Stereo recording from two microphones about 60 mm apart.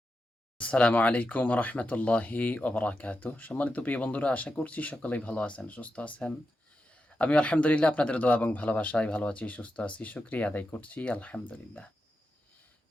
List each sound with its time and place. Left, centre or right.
0.6 s speech: left